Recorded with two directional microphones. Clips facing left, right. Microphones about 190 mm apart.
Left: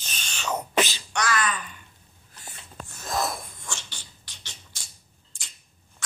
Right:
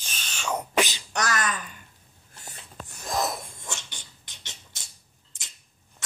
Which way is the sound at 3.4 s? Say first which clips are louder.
Right 1 dB; 20° right (ahead or behind).